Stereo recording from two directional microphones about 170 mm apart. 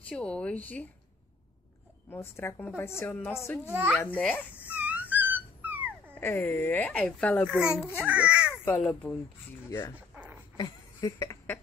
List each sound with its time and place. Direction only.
0.0 s a woman's voice: 5° left (ahead or behind)
2.0 s a woman's voice: 15° left (ahead or behind)
3.6 s a child's voice: 10° right (ahead or behind)
3.9 s a woman's voice: 5° left (ahead or behind)
4.6 s dog: 10° right (ahead or behind)
6.1 s a woman's voice: 10° left (ahead or behind)
7.9 s speech: 10° right (ahead or behind)
8.5 s speech: 10° left (ahead or behind)
9.9 s a sound: 10° right (ahead or behind)
10.6 s a sound: 20° left (ahead or behind)